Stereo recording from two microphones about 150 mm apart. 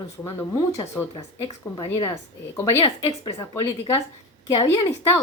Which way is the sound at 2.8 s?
35° left (ahead or behind).